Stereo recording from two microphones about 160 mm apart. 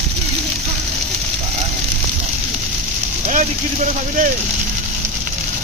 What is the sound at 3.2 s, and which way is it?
Vehicle, 50° right (ahead or behind).